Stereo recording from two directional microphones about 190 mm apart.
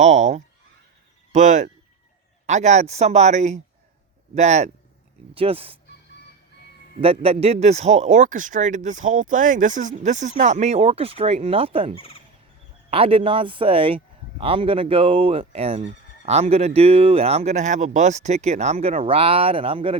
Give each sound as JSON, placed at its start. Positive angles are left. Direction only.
{"t": 0.0, "sound": "speech", "side_deg": -40}
{"t": 7.0, "sound": "speech", "side_deg": -30}
{"t": 11.9, "sound": "speech", "side_deg": 30}
{"t": 12.9, "sound": "speech", "side_deg": -30}